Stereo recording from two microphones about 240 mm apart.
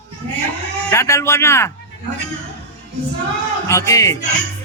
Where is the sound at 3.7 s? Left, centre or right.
Centre.